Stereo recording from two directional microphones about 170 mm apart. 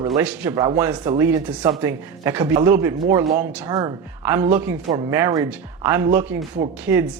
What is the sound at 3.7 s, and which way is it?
Speech, 25° right (ahead or behind).